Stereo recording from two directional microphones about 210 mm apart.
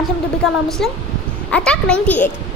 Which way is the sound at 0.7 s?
Centre (ahead or behind).